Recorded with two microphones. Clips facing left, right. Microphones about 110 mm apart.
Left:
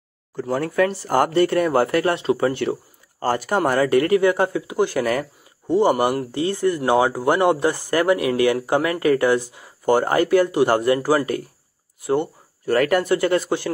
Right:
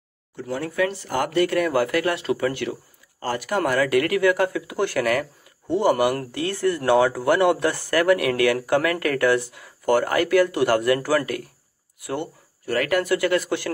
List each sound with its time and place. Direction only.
0.4 s speech: 40° left (ahead or behind)
12.1 s a sound: 25° left (ahead or behind)
12.7 s speech: 35° left (ahead or behind)
13.0 s speech: 25° left (ahead or behind)